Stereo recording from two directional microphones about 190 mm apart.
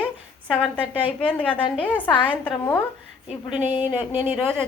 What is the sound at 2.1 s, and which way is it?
Speech, 25° left (ahead or behind).